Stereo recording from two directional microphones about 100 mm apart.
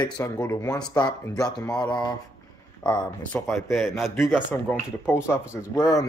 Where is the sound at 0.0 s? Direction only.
40° left (ahead or behind).